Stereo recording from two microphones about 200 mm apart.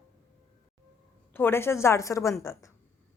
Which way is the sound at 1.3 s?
10° left (ahead or behind).